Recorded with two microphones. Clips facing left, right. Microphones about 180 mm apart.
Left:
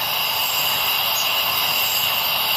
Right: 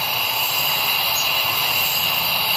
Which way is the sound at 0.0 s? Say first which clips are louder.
Even; 5° right (ahead or behind).